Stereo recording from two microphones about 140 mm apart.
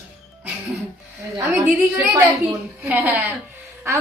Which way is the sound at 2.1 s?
15° right (ahead or behind).